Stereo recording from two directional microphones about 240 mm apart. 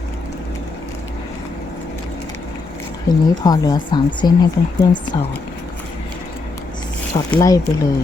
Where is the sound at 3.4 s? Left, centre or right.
Centre.